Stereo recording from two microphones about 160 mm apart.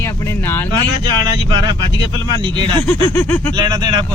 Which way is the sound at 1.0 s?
30° right (ahead or behind).